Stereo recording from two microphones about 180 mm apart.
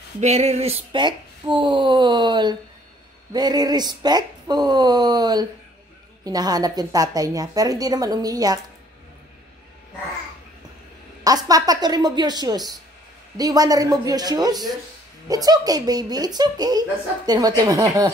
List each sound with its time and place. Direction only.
0.2 s a woman's voice: 35° right (ahead or behind); by 8.5 s 20° right (ahead or behind)
11.2 s a woman's voice: 20° right (ahead or behind)